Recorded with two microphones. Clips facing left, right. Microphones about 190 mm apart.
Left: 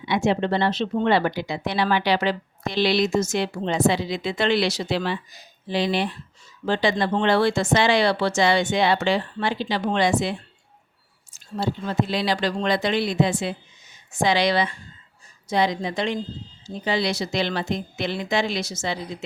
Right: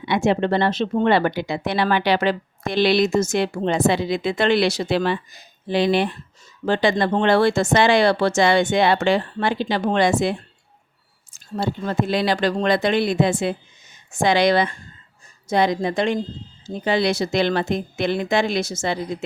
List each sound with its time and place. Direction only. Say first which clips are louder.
0.0 s speech: right 2 dB; 55° right (ahead or behind)